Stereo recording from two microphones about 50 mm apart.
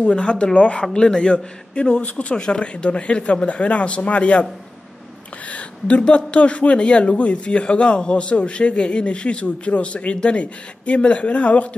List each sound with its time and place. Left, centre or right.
0.0 s speech: left
5.5 s speech: left